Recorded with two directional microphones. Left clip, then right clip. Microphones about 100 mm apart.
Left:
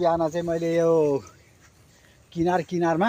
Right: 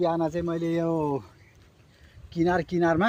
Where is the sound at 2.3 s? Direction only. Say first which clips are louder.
Left 1 dB; 50° right (ahead or behind).